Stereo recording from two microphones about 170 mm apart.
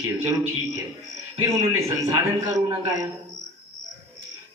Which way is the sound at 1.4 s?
20° right (ahead or behind).